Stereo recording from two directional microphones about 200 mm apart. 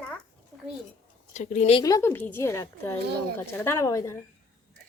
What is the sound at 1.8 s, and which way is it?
A woman's voice, 15° left (ahead or behind).